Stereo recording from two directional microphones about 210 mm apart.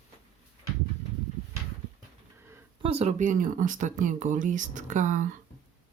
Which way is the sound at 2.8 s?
30° right (ahead or behind).